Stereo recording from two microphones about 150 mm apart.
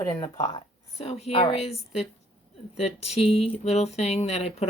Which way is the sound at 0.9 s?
45° left (ahead or behind).